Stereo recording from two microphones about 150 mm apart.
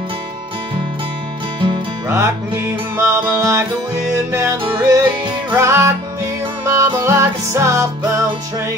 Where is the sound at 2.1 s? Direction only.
20° right (ahead or behind).